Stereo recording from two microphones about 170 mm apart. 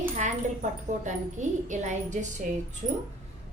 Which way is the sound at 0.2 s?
45° right (ahead or behind).